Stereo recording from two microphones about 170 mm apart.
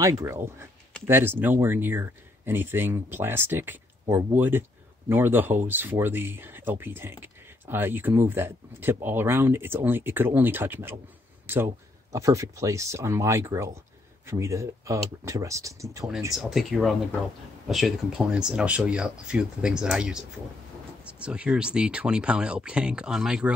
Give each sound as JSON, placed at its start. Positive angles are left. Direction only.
{"t": 0.0, "sound": "speech", "side_deg": -20}
{"t": 16.3, "sound": "speech", "side_deg": 0}